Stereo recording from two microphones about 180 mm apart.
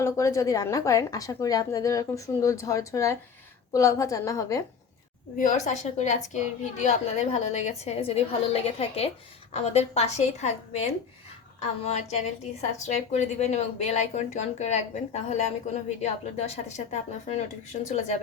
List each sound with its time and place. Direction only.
0.0 s a woman's voice: 15° left (ahead or behind)
5.4 s a woman's voice: 40° left (ahead or behind)